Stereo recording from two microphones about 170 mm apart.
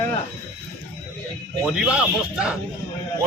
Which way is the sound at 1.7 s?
5° right (ahead or behind).